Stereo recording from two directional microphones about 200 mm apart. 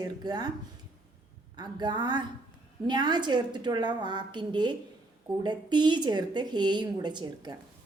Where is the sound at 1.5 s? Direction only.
20° right (ahead or behind).